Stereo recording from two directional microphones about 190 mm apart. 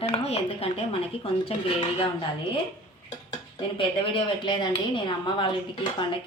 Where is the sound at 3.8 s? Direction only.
25° left (ahead or behind).